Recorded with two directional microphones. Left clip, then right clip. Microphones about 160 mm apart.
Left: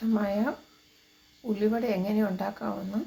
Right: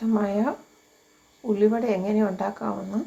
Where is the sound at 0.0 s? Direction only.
15° right (ahead or behind).